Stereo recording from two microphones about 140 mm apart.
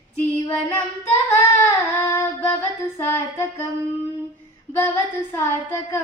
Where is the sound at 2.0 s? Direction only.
20° left (ahead or behind).